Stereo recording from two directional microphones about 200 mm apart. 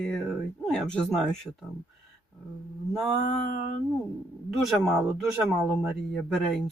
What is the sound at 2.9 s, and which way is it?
Speech, centre (ahead or behind).